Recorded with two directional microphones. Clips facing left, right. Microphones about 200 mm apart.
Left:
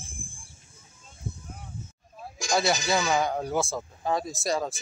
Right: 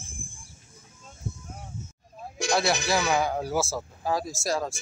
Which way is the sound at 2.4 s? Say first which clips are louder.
Right 4 dB; 60° right (ahead or behind).